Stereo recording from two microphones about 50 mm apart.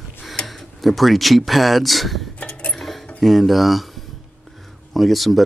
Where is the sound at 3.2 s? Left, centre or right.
Centre.